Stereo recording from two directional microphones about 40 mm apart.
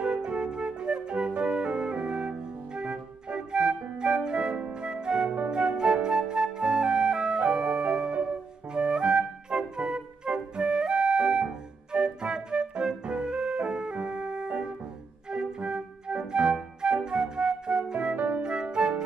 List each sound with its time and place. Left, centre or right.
0.0 s music: right
6.0 s flute: centre
7.3 s organ: right
8.1 s music: right
10.8 s flute: right
11.9 s music: right
18.1 s music: right
18.4 s music: right